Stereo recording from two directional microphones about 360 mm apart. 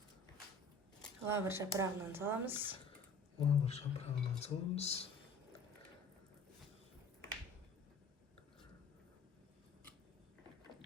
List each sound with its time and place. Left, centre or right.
1.0 s speech: centre
3.3 s speech: centre